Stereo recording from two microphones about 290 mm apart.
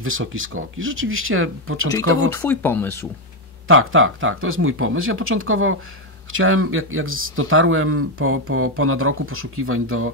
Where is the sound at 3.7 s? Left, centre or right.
Right.